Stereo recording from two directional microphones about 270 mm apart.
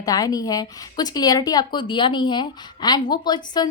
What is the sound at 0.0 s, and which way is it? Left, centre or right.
A woman's voice, centre.